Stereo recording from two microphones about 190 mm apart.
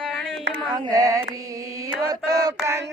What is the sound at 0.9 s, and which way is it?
Mantra, 20° right (ahead or behind).